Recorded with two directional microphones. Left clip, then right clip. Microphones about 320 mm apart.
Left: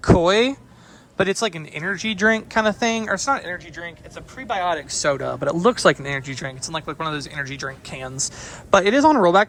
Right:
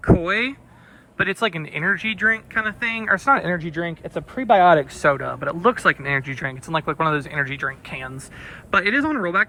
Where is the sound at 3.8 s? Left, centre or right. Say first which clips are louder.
Right 6 dB; left.